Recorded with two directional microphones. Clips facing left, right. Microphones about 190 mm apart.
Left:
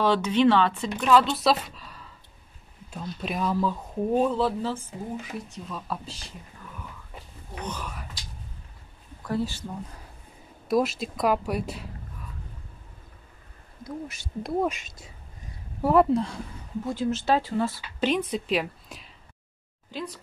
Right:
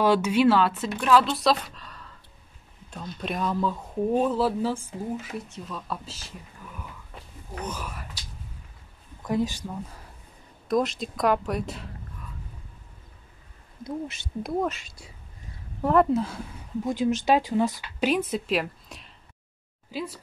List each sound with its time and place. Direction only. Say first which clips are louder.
0.0 s speech: right 1 dB; 10° right (ahead or behind)
5.5 s speech: even; centre (ahead or behind)
7.6 s speech: even; 5° right (ahead or behind)
9.2 s speech: right 2 dB; 15° right (ahead or behind)
10.7 s speech: left 1 dB; 5° left (ahead or behind)
13.8 s speech: right 3 dB; 25° right (ahead or behind)
14.7 s speech: even; 20° left (ahead or behind)
15.8 s speech: left 1 dB; 5° left (ahead or behind)
16.8 s speech: right 3 dB; 15° right (ahead or behind)